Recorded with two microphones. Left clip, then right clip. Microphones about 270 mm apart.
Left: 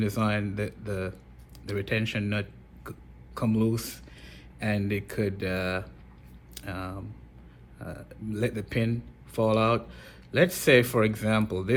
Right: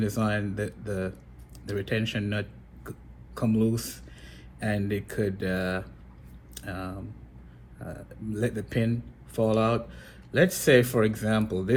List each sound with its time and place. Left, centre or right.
0.0 s speech: left